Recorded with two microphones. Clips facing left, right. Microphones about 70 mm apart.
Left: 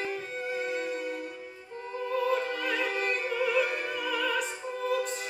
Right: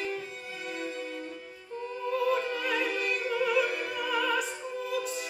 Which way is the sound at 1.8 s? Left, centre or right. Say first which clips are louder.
Even; left.